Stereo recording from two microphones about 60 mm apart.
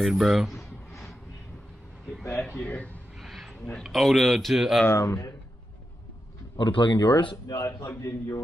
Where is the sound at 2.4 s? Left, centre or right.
Left.